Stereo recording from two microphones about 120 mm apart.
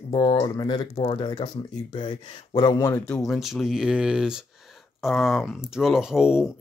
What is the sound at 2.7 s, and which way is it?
Speech, 30° left (ahead or behind).